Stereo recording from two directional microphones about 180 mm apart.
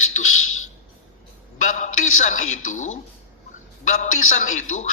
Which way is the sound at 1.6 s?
45° left (ahead or behind).